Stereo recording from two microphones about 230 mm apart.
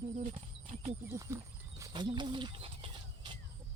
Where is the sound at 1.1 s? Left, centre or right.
Centre.